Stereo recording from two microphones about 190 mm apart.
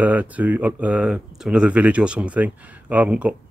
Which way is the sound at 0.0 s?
10° right (ahead or behind).